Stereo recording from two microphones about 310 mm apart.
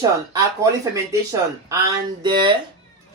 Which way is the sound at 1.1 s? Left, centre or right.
Centre.